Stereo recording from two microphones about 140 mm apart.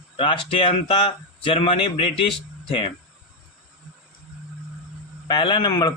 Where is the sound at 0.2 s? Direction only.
35° left (ahead or behind).